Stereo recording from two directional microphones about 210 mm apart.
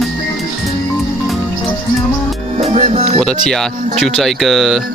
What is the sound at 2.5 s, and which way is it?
Music, 30° right (ahead or behind).